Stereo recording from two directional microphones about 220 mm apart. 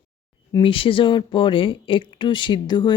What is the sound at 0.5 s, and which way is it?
Speech, 25° left (ahead or behind).